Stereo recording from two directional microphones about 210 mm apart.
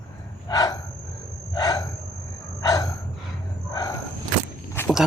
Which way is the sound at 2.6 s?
15° left (ahead or behind).